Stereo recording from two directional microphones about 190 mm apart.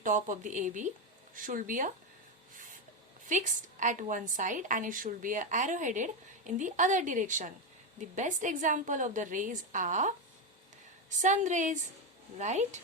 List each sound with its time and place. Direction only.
0.0 s a woman's voice: 45° right (ahead or behind)
3.2 s a woman's voice: 40° right (ahead or behind)
11.2 s a woman's voice: 40° right (ahead or behind)